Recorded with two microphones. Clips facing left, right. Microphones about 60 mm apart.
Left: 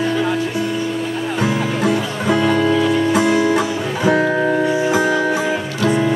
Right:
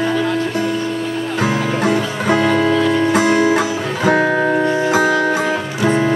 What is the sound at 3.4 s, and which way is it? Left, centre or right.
Music, right.